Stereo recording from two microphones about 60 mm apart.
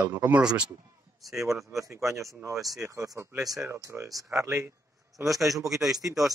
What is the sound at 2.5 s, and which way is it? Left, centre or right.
Speech, centre.